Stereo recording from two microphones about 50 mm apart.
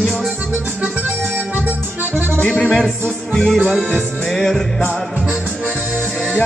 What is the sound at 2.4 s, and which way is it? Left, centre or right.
Music, left.